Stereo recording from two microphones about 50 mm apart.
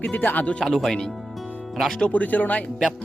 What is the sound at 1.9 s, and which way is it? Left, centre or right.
Speech, left.